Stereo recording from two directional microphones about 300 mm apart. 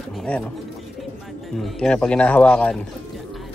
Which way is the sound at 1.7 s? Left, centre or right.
Centre.